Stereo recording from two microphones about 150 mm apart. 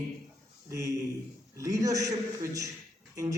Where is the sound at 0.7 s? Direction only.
20° right (ahead or behind).